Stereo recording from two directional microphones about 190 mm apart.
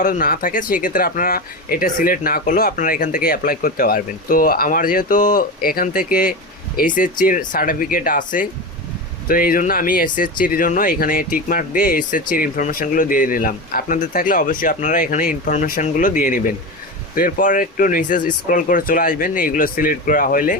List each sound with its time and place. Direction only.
0.0 s speech: 45° left (ahead or behind)